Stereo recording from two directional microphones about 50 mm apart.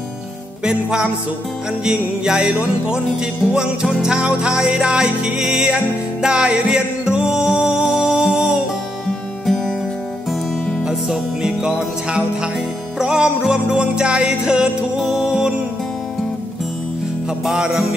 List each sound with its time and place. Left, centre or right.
0.7 s music: centre
4.0 s music: right
10.8 s music: centre
17.5 s music: centre